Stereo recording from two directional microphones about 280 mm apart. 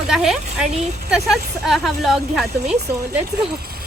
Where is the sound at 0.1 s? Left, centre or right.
Centre.